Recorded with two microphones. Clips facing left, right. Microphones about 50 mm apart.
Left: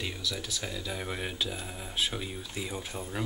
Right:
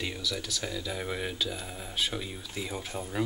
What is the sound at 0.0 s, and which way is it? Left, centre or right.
Speech, centre.